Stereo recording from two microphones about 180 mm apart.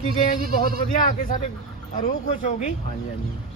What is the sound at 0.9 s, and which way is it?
Speech, 50° left (ahead or behind).